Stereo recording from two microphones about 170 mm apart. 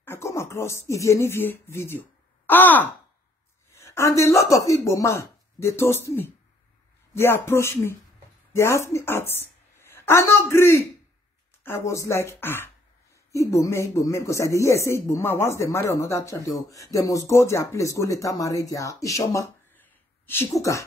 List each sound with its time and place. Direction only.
0.0 s a woman's voice: 15° left (ahead or behind)